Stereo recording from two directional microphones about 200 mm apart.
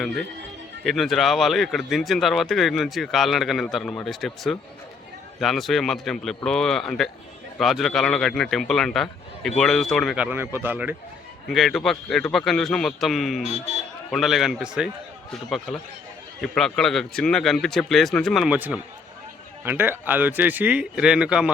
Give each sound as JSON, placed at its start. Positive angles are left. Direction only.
{"t": 0.9, "sound": "speech", "side_deg": 0}
{"t": 11.4, "sound": "speech", "side_deg": 0}
{"t": 13.5, "sound": "speech", "side_deg": -35}
{"t": 14.1, "sound": "speech", "side_deg": 0}